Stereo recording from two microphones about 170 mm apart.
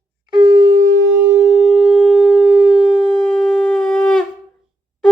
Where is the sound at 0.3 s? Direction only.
25° right (ahead or behind).